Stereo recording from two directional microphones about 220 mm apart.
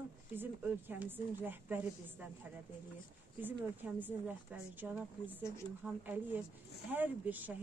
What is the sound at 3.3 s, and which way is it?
Speech, 10° right (ahead or behind).